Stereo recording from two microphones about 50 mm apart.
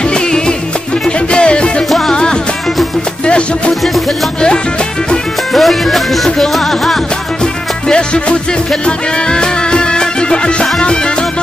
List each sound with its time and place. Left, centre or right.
0.1 s music: centre
5.5 s music: centre
7.9 s music: left